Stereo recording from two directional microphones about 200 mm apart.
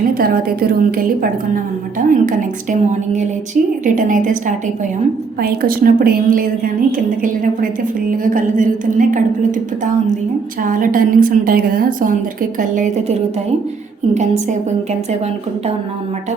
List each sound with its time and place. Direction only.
0.1 s a woman's voice: 45° right (ahead or behind)
10.6 s a woman's voice: 45° right (ahead or behind)